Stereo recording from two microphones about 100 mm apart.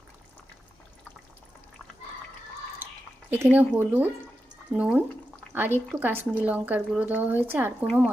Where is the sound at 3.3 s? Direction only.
15° right (ahead or behind).